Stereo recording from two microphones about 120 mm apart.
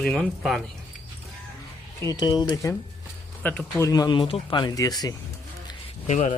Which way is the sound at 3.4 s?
10° left (ahead or behind).